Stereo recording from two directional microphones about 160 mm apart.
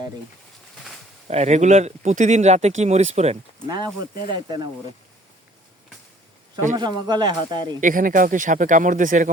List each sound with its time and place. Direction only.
1.3 s speech: 45° right (ahead or behind)
3.7 s speech: 25° right (ahead or behind)
6.7 s speech: 25° right (ahead or behind)
7.8 s speech: 55° right (ahead or behind)